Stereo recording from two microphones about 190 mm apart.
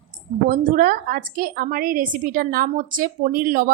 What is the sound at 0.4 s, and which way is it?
A woman's voice, 45° right (ahead or behind).